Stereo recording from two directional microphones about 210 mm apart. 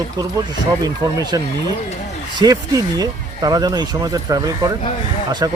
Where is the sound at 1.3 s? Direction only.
20° right (ahead or behind).